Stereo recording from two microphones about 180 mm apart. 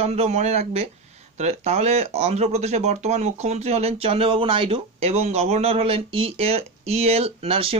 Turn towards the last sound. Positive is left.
turn(degrees=-30)  # may be behind; listen again after turning